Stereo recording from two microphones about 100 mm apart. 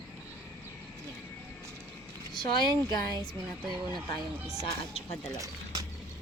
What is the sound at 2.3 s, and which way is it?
Speech, 45° left (ahead or behind).